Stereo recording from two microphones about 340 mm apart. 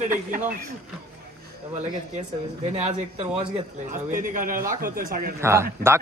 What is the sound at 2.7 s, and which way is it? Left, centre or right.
A man's voice, centre.